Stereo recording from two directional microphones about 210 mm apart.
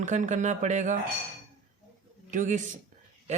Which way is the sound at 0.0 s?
35° right (ahead or behind).